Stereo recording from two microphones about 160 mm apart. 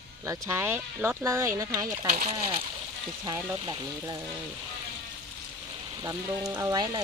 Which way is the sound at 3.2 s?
30° right (ahead or behind).